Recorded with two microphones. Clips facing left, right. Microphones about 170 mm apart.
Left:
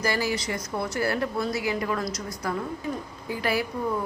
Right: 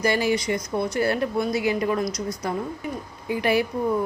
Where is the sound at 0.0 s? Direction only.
20° right (ahead or behind).